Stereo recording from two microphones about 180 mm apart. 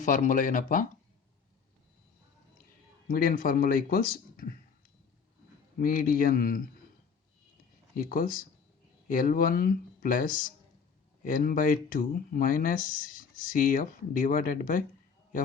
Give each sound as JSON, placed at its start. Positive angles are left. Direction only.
{"t": 0.0, "sound": "speech", "side_deg": 45}
{"t": 3.1, "sound": "speech", "side_deg": 55}
{"t": 5.7, "sound": "speech", "side_deg": 50}
{"t": 7.9, "sound": "speech", "side_deg": 50}